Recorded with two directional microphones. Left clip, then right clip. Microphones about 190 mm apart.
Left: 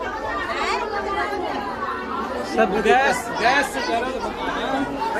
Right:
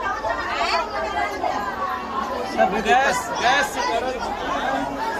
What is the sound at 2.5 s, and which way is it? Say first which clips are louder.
Speech: left 1 dB; 25° left (ahead or behind).